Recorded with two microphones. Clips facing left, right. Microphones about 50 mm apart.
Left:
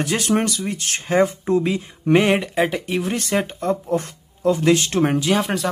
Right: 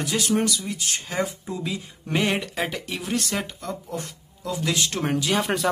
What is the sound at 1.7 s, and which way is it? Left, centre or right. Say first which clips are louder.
Speech: left 10 dB; left.